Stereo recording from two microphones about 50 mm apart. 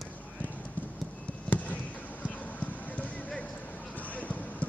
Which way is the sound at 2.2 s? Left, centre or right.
Left.